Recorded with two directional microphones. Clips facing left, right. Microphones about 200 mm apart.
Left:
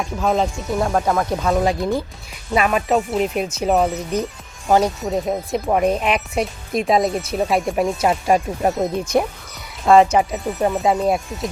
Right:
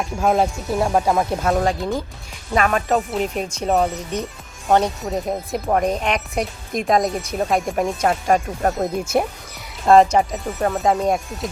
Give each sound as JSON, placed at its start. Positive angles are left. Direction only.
{"t": 0.0, "sound": "speech", "side_deg": -5}
{"t": 0.8, "sound": "speech", "side_deg": -15}
{"t": 1.3, "sound": "speech", "side_deg": 0}
{"t": 2.6, "sound": "speech", "side_deg": 5}
{"t": 3.9, "sound": "speech", "side_deg": 35}
{"t": 4.7, "sound": "speech", "side_deg": 0}
{"t": 10.3, "sound": "speech", "side_deg": 15}
{"t": 10.9, "sound": "speech", "side_deg": 0}